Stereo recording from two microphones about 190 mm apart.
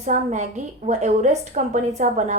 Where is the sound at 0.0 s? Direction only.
40° right (ahead or behind).